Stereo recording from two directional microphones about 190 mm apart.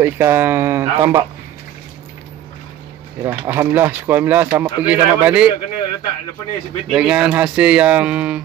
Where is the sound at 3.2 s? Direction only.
15° right (ahead or behind).